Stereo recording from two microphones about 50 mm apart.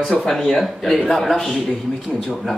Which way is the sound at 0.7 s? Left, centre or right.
Centre.